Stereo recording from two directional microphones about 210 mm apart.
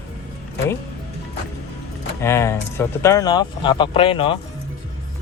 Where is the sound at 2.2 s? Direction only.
10° left (ahead or behind).